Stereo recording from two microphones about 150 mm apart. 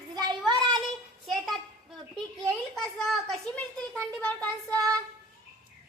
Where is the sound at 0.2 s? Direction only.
30° right (ahead or behind).